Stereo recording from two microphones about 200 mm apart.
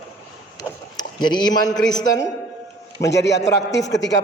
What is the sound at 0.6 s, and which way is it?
Vehicle, 20° left (ahead or behind).